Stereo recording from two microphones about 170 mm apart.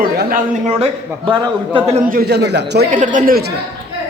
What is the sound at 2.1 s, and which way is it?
Speech, 70° right (ahead or behind).